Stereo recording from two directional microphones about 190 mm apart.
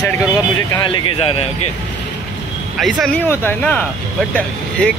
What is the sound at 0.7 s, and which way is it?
Speech, 25° left (ahead or behind).